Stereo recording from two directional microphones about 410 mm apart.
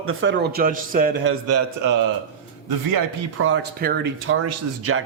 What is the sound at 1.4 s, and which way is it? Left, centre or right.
Speech, right.